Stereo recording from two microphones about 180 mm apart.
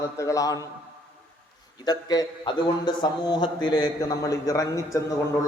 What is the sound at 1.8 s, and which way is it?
A man's voice, 20° left (ahead or behind).